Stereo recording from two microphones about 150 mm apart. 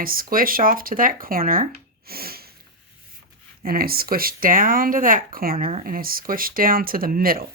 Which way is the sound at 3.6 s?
80° right.